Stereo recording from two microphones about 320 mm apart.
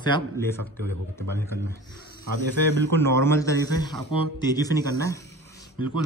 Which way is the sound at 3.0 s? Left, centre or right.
Centre.